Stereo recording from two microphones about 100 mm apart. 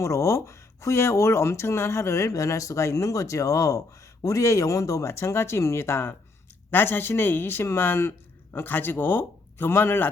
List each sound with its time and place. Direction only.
0.0 s speech: 30° left (ahead or behind)